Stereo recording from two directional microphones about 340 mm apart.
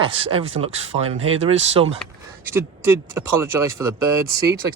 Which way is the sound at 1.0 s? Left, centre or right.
Right.